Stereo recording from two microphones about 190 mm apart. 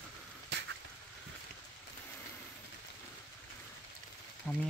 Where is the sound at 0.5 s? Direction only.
65° right (ahead or behind).